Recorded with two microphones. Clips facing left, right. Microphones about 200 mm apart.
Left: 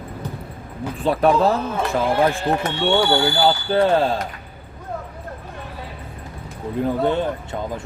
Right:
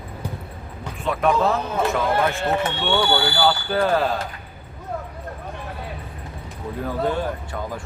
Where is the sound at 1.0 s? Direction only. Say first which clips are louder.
Left 3 dB; 35° left (ahead or behind).